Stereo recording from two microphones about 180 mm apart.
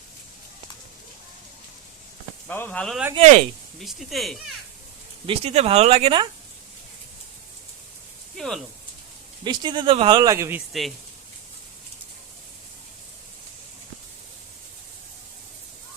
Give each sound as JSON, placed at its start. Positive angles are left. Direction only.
{"t": 2.5, "sound": "speech", "side_deg": 10}
{"t": 3.2, "sound": "speech", "side_deg": -35}
{"t": 3.8, "sound": "speech", "side_deg": 0}
{"t": 5.2, "sound": "speech", "side_deg": -30}
{"t": 8.4, "sound": "speech", "side_deg": 0}
{"t": 9.4, "sound": "speech", "side_deg": -25}
{"t": 10.7, "sound": "speech", "side_deg": 0}